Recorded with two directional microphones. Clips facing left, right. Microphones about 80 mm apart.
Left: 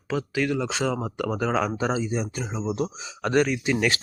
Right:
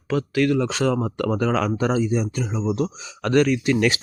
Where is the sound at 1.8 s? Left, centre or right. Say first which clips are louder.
Right 4 dB; centre.